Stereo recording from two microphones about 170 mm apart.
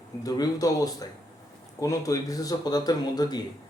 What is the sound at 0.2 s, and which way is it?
Speech, 20° left (ahead or behind).